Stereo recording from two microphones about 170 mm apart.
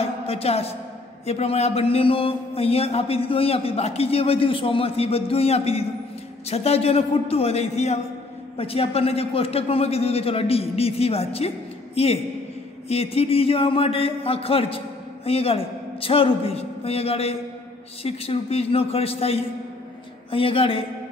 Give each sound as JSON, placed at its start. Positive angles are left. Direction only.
{"t": 0.0, "sound": "a woman's voice", "side_deg": 35}